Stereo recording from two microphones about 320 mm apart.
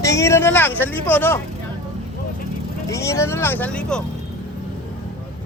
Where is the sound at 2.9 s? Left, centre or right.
Centre.